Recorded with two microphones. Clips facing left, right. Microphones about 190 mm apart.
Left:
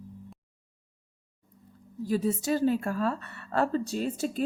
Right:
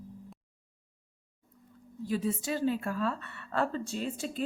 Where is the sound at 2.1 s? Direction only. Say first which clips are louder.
Left 4 dB; 40° left (ahead or behind).